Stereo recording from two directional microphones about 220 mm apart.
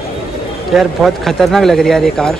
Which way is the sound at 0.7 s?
Centre (ahead or behind).